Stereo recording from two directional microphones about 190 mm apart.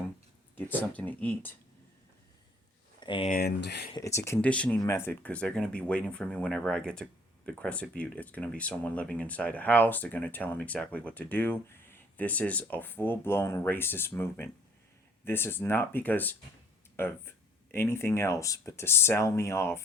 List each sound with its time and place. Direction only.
0.7 s speech: 10° left (ahead or behind)
3.0 s speech: 25° left (ahead or behind)
3.2 s speech: 50° left (ahead or behind)
3.9 s speech: 15° left (ahead or behind)